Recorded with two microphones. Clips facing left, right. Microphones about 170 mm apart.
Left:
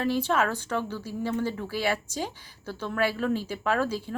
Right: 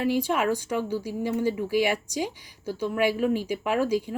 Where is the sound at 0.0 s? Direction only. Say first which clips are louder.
Right 1 dB; 15° right (ahead or behind).